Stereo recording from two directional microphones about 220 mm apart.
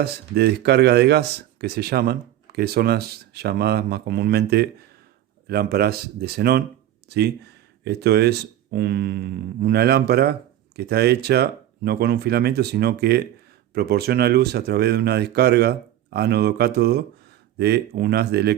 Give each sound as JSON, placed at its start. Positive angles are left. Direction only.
{"t": 0.0, "sound": "speech", "side_deg": -50}